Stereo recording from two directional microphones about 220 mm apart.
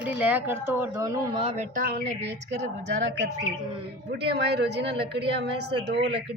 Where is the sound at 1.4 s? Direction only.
30° right (ahead or behind); by 6.3 s 50° right (ahead or behind).